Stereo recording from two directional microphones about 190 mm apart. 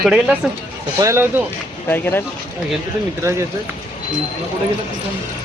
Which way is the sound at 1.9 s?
10° left (ahead or behind).